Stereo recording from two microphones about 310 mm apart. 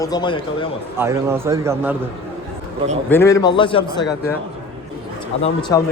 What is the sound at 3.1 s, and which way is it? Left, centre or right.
Speech, centre.